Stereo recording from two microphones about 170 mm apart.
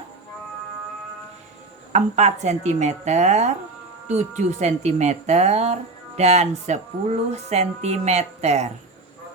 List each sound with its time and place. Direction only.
1.9 s speech: 40° right (ahead or behind)